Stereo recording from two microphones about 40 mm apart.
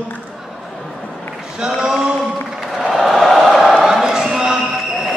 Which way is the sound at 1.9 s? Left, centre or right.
Centre.